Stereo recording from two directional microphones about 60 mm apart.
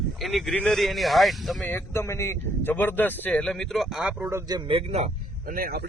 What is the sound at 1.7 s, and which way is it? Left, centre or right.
Speech, left.